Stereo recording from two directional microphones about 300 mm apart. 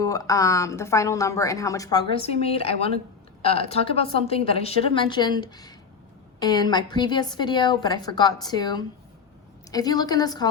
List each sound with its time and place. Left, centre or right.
0.0 s a woman's voice: centre